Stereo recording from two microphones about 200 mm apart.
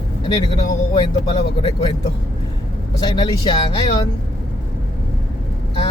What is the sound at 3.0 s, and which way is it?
Speech, 20° left (ahead or behind).